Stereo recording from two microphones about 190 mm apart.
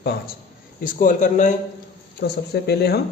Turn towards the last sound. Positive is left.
turn(degrees=55)  # may be behind; listen again after turning